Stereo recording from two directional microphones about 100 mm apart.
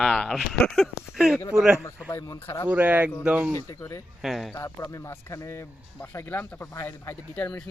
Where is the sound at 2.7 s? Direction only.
15° right (ahead or behind).